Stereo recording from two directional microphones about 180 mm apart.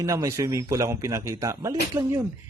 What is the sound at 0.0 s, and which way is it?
Speech, 15° right (ahead or behind).